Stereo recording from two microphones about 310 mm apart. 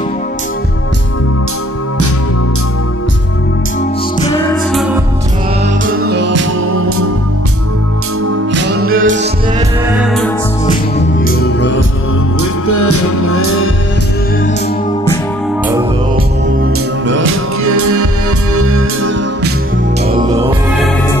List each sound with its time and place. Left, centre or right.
5.9 s music: right
8.6 s music: right
9.0 s music: right
9.8 s music: centre
11.2 s music: left
12.6 s music: left
17.2 s music: right
18.6 s music: right
20.2 s music: centre